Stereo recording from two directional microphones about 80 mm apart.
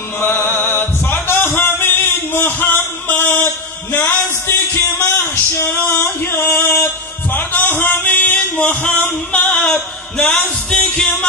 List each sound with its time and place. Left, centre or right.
0.2 s music: left
7.3 s a sound: left
9.3 s music: centre